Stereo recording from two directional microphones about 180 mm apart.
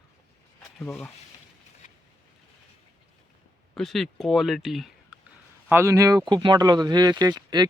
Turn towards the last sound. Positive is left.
turn(degrees=-25)  # may be behind; listen again after turning